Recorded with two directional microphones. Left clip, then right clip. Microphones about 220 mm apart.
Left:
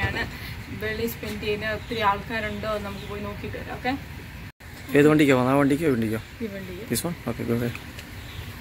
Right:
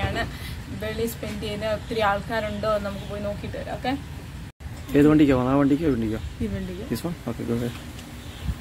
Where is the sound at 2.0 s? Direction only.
40° right (ahead or behind).